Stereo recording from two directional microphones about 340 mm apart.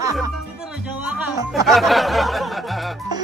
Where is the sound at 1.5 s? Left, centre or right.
Centre.